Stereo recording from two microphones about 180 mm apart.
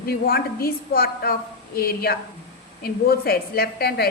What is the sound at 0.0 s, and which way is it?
A woman's voice, 60° left (ahead or behind).